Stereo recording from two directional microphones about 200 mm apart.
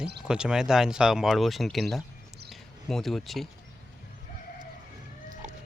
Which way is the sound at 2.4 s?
Centre (ahead or behind).